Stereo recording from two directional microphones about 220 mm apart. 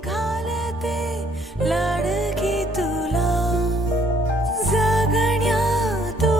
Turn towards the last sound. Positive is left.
turn(degrees=0)  # may be behind; listen again after turning